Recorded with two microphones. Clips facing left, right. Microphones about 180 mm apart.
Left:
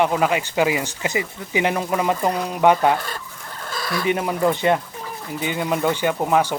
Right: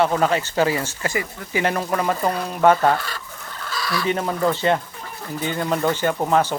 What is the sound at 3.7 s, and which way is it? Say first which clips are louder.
Chicken: even; 50° left (ahead or behind).